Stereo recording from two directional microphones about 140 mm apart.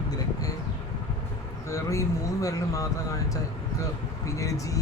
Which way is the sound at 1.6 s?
20° left (ahead or behind).